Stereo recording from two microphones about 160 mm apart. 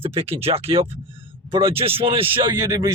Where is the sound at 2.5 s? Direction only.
20° right (ahead or behind).